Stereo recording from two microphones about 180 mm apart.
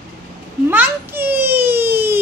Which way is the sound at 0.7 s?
10° right (ahead or behind).